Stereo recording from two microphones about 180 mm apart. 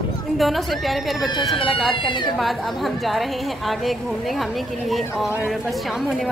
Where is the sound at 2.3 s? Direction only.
Centre (ahead or behind).